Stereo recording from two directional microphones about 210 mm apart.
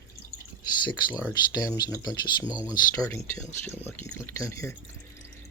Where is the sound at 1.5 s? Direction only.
20° left (ahead or behind).